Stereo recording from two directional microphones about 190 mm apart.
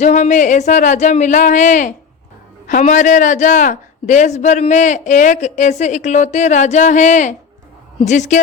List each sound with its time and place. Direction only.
0.0 s a man's voice: 40° left (ahead or behind)